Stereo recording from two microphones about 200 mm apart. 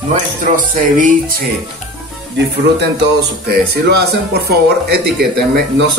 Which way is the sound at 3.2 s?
55° right (ahead or behind).